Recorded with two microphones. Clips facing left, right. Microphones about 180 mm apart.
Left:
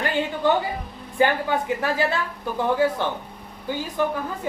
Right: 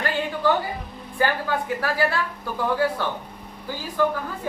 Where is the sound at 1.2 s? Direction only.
20° left (ahead or behind).